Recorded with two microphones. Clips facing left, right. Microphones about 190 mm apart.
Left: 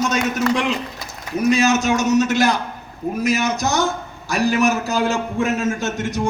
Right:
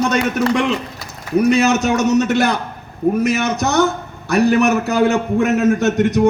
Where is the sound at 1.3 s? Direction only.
60° right (ahead or behind).